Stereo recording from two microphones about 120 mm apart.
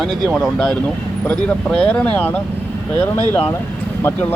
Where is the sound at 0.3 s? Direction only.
5° left (ahead or behind).